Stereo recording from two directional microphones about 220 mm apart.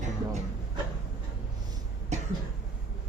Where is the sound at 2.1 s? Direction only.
30° right (ahead or behind).